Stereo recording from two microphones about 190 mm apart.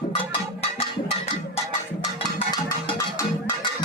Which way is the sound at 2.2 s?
25° left (ahead or behind).